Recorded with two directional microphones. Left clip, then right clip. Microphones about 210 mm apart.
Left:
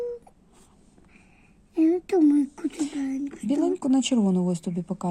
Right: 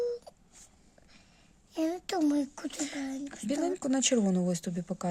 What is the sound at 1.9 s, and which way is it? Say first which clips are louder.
A child's voice: left 9 dB; 35° right (ahead or behind).